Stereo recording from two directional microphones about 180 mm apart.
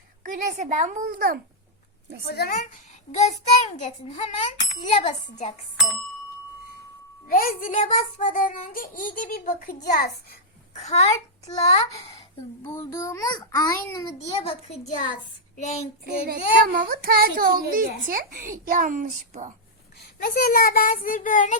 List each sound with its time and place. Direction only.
0.3 s a child's voice: 45° right (ahead or behind)
2.2 s a woman's voice: 60° left (ahead or behind)
3.2 s a child's voice: 40° left (ahead or behind)
7.3 s a child's voice: 55° left (ahead or behind)
10.8 s a child's voice: 40° left (ahead or behind)
12.6 s a child's voice: 20° left (ahead or behind)
14.7 s a child's voice: 40° left (ahead or behind)
15.5 s child singing: 40° left (ahead or behind)
16.0 s a child's voice: 55° right (ahead or behind)
20.2 s a child's voice: 55° left (ahead or behind)